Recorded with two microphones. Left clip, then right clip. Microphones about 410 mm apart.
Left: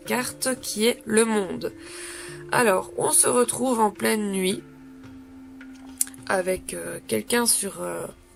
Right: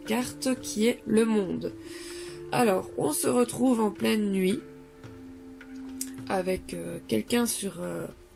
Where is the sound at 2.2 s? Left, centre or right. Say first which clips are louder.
Left 4 dB; left.